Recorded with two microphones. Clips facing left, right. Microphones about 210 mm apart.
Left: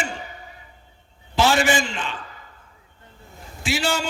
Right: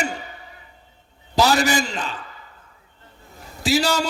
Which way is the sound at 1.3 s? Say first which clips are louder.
Right 1 dB; 40° right (ahead or behind).